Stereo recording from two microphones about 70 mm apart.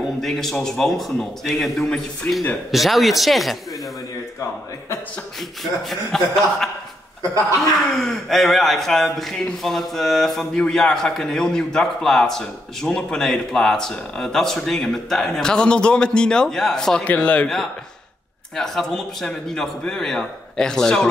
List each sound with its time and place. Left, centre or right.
0.2 s speech: centre
5.6 s speech: centre
8.0 s a man's voice: centre
17.0 s speech: left
18.6 s a man's voice: centre